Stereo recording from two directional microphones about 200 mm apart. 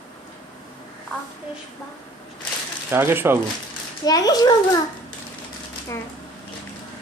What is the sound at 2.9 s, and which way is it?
Speech, 10° right (ahead or behind).